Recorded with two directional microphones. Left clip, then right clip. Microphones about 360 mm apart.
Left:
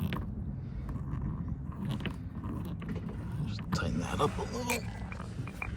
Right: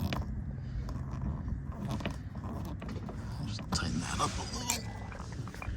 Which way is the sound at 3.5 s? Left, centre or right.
Centre.